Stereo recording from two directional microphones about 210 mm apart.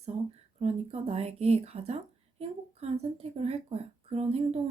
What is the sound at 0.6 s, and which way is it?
A woman's voice, 30° right (ahead or behind).